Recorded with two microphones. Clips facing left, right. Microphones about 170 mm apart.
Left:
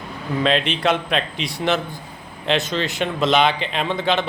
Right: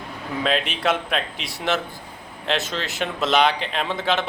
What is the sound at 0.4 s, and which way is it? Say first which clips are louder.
A man's voice: left 3 dB; 5° right (ahead or behind).